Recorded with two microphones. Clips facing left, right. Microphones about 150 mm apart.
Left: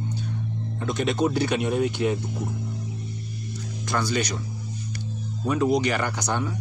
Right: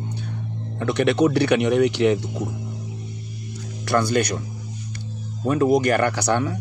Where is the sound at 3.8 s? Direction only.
55° right (ahead or behind).